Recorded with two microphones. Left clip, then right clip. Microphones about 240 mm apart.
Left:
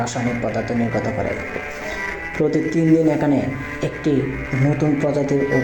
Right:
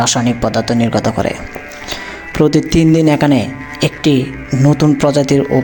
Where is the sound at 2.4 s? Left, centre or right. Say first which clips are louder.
Right 7 dB; right.